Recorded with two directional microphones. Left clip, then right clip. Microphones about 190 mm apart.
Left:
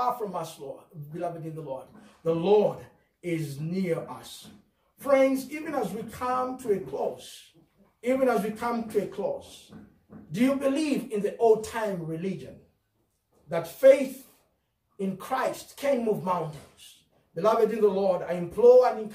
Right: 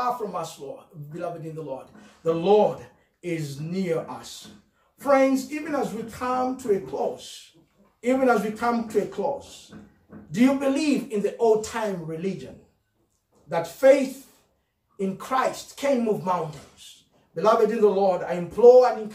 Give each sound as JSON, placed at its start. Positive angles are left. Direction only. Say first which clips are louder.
{"t": 0.0, "sound": "a woman's voice", "louder": "right 2 dB", "side_deg": 0}
{"t": 3.2, "sound": "a woman's voice", "louder": "right 1 dB", "side_deg": 0}
{"t": 13.5, "sound": "a woman's voice", "louder": "right 1 dB", "side_deg": 0}
{"t": 15.0, "sound": "a woman's voice", "louder": "right 5 dB", "side_deg": 0}
{"t": 17.4, "sound": "a woman's voice", "louder": "right 3 dB", "side_deg": 0}